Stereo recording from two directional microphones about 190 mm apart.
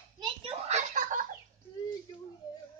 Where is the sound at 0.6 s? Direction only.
40° right (ahead or behind).